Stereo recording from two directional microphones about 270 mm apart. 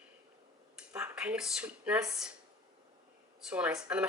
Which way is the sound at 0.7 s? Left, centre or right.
Centre.